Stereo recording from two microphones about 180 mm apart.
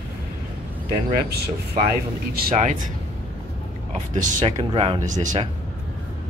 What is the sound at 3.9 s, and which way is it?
Speech, 45° right (ahead or behind).